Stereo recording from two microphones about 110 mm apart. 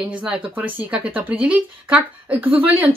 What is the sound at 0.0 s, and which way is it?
Speech, 10° right (ahead or behind).